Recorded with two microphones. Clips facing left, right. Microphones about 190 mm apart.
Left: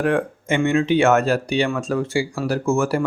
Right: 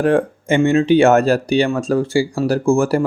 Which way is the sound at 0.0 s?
35° right (ahead or behind).